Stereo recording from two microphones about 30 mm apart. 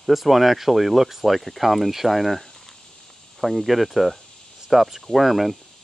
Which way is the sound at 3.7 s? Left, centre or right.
Centre.